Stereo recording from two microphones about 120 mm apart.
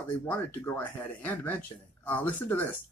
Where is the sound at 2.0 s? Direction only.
15° left (ahead or behind).